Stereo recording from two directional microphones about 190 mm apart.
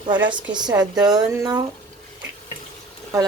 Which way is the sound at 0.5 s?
20° right (ahead or behind).